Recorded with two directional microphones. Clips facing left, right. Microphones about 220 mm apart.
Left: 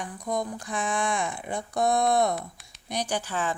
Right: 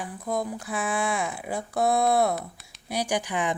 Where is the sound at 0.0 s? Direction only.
5° right (ahead or behind).